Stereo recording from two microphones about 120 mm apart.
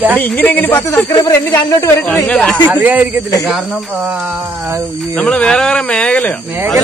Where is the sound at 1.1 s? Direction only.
25° left (ahead or behind).